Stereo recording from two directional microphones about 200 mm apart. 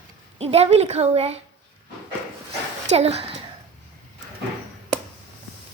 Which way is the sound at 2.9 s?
30° right (ahead or behind).